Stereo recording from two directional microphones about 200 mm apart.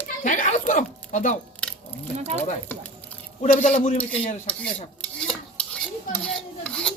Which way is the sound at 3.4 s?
40° left (ahead or behind).